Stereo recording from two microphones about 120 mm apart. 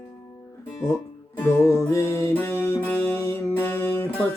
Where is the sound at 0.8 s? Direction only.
20° left (ahead or behind).